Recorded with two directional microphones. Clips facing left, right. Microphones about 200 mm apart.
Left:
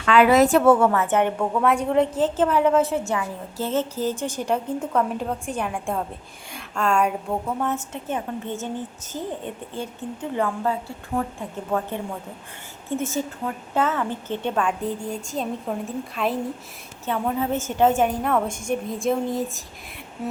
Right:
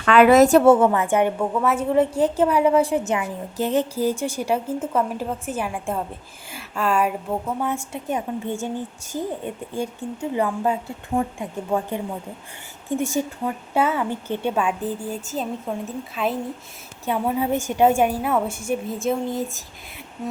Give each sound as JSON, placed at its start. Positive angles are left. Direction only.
{"t": 0.0, "sound": "a woman's voice", "side_deg": -55}
{"t": 0.6, "sound": "a woman's voice", "side_deg": -25}
{"t": 0.9, "sound": "a woman's voice", "side_deg": -10}
{"t": 17.1, "sound": "a woman's voice", "side_deg": -10}